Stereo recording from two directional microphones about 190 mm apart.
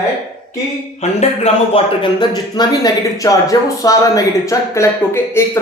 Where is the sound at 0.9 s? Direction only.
35° left (ahead or behind).